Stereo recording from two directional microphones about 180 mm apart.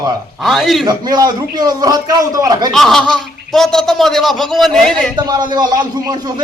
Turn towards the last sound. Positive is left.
turn(degrees=-20)  # may be behind; listen again after turning